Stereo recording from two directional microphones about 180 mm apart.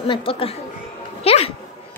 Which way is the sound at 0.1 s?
30° left (ahead or behind).